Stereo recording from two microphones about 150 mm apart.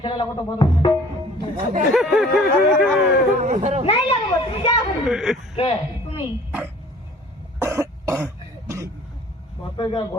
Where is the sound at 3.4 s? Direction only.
55° right (ahead or behind).